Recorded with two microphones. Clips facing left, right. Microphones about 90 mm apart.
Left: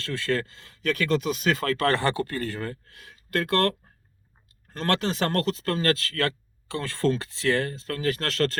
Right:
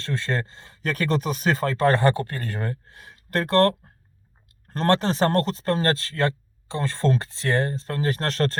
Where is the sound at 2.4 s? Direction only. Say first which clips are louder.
Right 1 dB; 20° right (ahead or behind).